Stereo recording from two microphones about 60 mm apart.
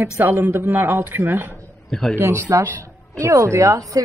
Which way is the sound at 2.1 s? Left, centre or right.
Right.